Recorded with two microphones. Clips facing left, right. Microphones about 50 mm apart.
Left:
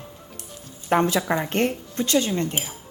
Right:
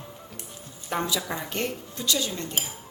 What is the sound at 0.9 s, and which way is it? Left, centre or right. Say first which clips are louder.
Speech: left 8 dB; left.